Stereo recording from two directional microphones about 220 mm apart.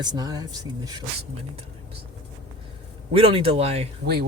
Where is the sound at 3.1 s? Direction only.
25° right (ahead or behind).